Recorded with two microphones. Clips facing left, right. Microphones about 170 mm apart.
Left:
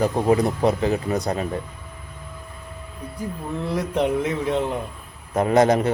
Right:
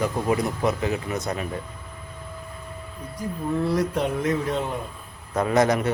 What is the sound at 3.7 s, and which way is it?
A man's voice, 20° left (ahead or behind).